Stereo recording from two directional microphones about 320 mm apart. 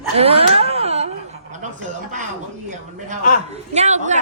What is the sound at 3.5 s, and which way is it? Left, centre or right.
Speech, right.